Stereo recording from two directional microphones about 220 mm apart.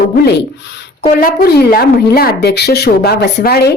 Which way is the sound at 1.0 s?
45° left (ahead or behind).